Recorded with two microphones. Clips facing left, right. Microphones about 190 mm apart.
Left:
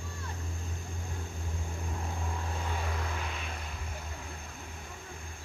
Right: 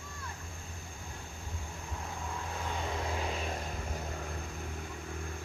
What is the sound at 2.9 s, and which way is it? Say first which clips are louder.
Vehicle: right 3 dB; 25° right (ahead or behind).